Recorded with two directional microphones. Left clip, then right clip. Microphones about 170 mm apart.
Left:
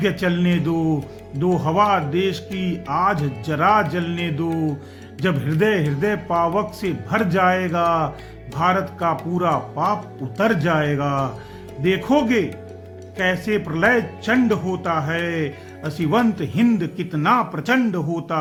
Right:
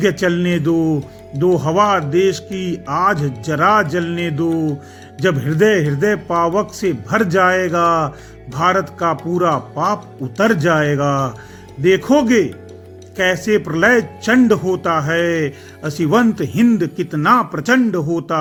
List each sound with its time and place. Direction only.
0.0 s speech: 25° right (ahead or behind)